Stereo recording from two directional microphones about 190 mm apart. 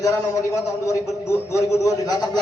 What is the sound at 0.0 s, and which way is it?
A man's voice, 15° left (ahead or behind).